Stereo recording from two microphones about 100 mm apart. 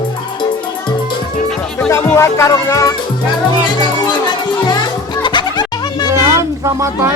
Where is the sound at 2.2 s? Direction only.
30° left (ahead or behind).